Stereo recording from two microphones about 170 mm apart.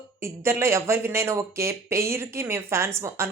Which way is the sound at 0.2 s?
15° right (ahead or behind).